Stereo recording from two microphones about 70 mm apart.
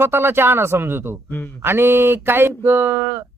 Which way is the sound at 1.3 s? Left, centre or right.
Left.